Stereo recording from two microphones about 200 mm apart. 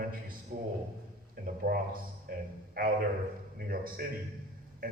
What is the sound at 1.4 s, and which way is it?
A man's voice, 50° right (ahead or behind).